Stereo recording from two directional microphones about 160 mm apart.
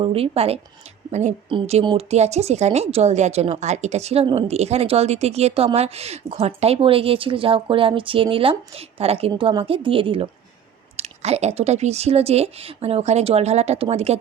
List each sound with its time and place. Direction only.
0.0 s a woman's voice: 35° right (ahead or behind)
1.5 s a woman's voice: 35° right (ahead or behind)